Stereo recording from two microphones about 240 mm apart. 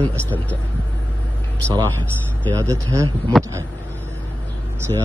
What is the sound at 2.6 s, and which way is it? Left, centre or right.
Speech, centre.